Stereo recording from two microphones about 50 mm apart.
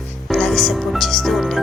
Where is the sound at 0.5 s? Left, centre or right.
Centre.